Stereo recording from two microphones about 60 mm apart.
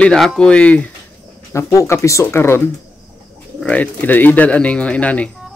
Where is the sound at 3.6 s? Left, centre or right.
Left.